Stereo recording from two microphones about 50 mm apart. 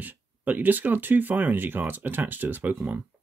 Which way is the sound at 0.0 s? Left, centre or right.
Right.